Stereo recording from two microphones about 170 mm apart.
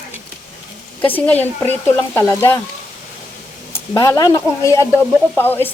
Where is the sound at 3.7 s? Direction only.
25° left (ahead or behind).